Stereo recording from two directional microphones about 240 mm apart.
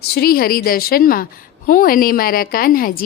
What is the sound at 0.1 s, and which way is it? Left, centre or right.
A woman's voice, left.